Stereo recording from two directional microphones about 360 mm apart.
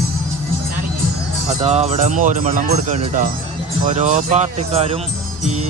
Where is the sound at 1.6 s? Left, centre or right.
Centre.